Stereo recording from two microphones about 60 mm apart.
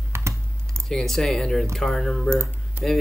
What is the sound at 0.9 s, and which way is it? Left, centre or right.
Speech, centre.